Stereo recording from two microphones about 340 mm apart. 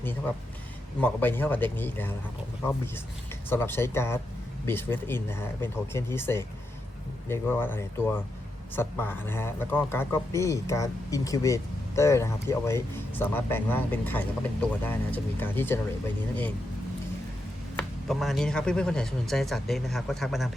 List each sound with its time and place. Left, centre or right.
0.0 s speech: centre
17.7 s speech: centre